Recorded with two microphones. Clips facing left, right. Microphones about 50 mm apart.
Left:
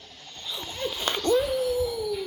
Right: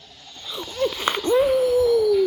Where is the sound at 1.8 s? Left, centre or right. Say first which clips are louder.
Right 10 dB; right.